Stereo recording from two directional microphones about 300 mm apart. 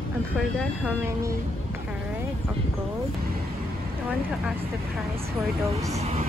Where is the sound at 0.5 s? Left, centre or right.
Centre.